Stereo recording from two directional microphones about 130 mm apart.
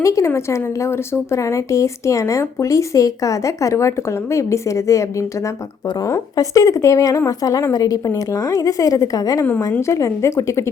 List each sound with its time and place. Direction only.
0.0 s a woman's voice: 25° left (ahead or behind)